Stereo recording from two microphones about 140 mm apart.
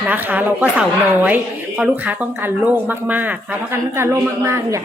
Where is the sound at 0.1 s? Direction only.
15° right (ahead or behind).